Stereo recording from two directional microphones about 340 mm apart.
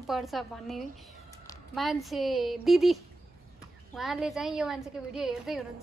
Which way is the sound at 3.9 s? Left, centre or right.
Centre.